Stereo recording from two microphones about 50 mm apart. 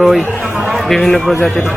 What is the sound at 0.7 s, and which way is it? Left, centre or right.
Speech, centre.